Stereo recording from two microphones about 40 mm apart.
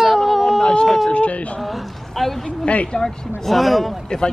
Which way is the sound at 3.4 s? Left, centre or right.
Centre.